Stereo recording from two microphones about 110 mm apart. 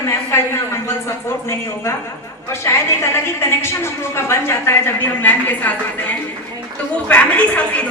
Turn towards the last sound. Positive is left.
turn(degrees=10)  # may be behind; listen again after turning